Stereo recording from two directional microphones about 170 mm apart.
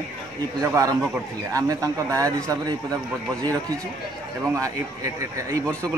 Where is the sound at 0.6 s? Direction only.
20° right (ahead or behind).